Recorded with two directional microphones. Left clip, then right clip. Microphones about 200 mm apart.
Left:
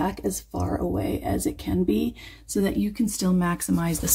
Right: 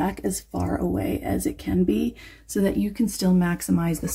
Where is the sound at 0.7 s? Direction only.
10° right (ahead or behind).